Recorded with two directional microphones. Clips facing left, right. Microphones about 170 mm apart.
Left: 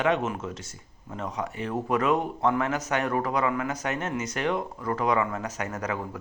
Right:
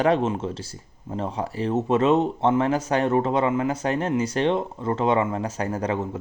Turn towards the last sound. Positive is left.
turn(degrees=-25)  # may be behind; listen again after turning